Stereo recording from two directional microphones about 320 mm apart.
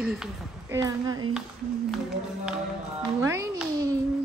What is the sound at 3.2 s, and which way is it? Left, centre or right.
Music, centre.